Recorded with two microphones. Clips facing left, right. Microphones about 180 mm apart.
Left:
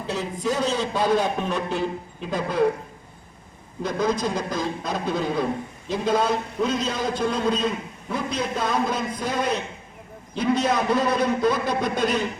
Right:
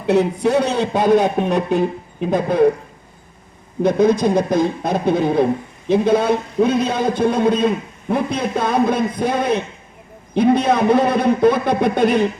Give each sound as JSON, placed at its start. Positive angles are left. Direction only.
{"t": 0.0, "sound": "a man's voice", "side_deg": -65}
{"t": 3.8, "sound": "a man's voice", "side_deg": -55}